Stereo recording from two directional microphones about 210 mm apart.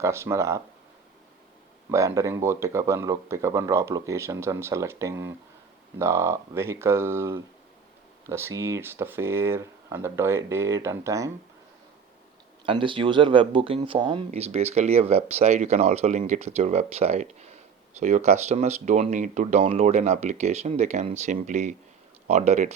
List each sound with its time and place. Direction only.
0.0 s speech: 15° right (ahead or behind)
1.9 s speech: 15° right (ahead or behind)
12.6 s speech: 25° right (ahead or behind)